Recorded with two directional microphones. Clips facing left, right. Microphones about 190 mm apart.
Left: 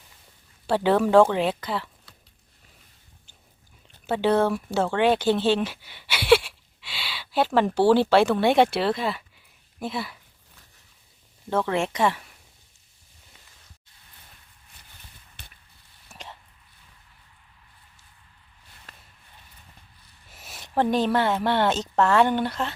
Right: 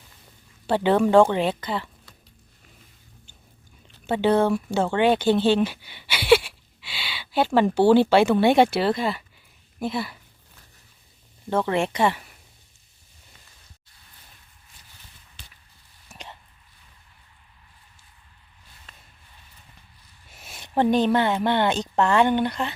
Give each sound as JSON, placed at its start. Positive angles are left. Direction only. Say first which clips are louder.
{"t": 0.7, "sound": "speech", "louder": "right 1 dB", "side_deg": 0}
{"t": 4.0, "sound": "speech", "louder": "right 1 dB", "side_deg": 0}
{"t": 11.4, "sound": "speech", "louder": "right 1 dB", "side_deg": 0}
{"t": 15.4, "sound": "a sound", "louder": "left 1 dB", "side_deg": 60}
{"t": 16.0, "sound": "whispering", "louder": "even", "side_deg": 0}
{"t": 20.3, "sound": "speech", "louder": "right 1 dB", "side_deg": 0}